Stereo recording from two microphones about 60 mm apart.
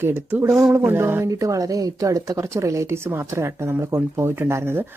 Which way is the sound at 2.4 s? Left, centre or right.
Right.